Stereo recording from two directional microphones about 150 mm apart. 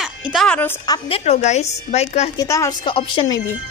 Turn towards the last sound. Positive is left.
turn(degrees=35)  # may be behind; listen again after turning